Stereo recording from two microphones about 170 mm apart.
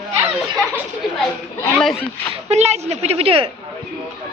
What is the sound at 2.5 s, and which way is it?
A woman's voice, 40° right (ahead or behind).